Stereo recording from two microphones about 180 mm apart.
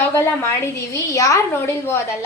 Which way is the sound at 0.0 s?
15° left (ahead or behind).